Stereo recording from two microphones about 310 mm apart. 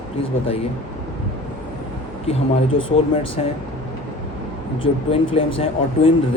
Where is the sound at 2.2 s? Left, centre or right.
Centre.